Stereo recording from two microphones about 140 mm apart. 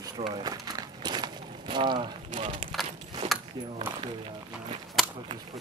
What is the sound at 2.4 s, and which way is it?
Speech, 35° right (ahead or behind).